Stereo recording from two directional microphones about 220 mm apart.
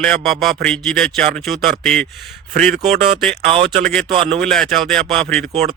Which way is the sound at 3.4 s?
25° right (ahead or behind).